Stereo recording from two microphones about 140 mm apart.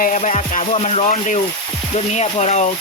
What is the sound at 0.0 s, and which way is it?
Speech, 60° left (ahead or behind).